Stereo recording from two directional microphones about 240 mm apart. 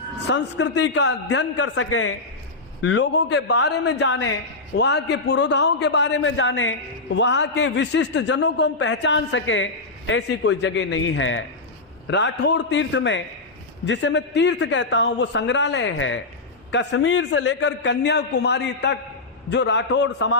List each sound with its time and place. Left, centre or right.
0.3 s a man's voice: left
2.8 s a man's voice: left